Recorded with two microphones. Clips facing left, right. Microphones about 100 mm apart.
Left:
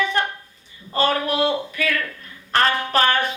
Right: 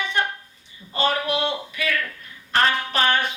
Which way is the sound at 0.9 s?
40° left (ahead or behind).